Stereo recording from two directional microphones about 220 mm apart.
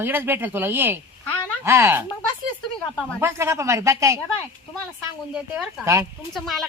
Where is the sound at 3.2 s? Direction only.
10° right (ahead or behind).